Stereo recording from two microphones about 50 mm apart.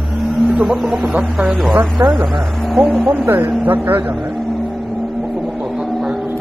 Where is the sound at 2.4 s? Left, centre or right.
Centre.